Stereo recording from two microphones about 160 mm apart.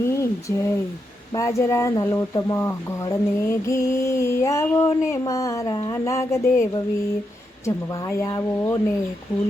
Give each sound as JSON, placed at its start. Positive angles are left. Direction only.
{"t": 0.0, "sound": "a sound", "side_deg": 15}
{"t": 1.4, "sound": "mantra", "side_deg": 20}
{"t": 8.1, "sound": "mantra", "side_deg": 20}